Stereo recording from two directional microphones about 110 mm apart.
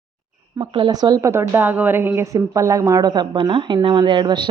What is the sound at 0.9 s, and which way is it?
A woman's voice, 35° right (ahead or behind).